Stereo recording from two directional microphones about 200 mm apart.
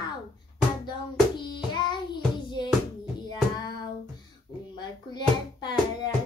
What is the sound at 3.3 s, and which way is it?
Child singing, 20° left (ahead or behind).